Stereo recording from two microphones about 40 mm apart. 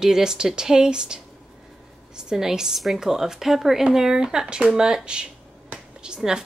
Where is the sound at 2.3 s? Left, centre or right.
Centre.